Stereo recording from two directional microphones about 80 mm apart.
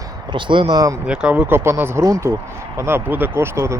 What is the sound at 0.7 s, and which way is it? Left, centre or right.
Speech, right.